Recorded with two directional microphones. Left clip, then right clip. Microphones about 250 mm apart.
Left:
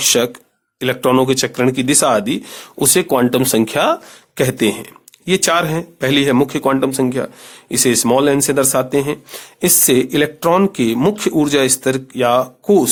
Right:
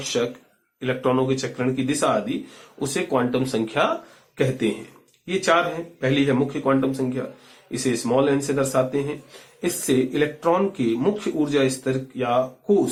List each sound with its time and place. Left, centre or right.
0.8 s speech: left
5.2 s speech: left